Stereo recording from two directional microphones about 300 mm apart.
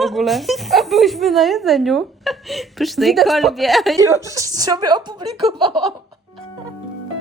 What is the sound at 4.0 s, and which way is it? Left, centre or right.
A woman's voice, centre.